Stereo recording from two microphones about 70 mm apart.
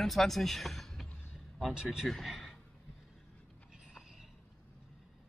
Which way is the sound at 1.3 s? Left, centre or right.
Centre.